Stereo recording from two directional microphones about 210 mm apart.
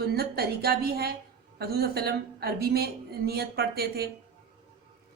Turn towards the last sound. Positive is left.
turn(degrees=-50)  # may be behind; listen again after turning